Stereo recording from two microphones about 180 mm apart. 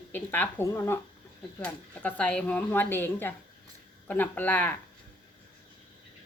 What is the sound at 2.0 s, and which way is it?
Speech, 5° left (ahead or behind).